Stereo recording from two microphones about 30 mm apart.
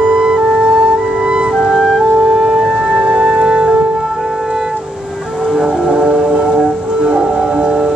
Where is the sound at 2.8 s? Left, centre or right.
Right.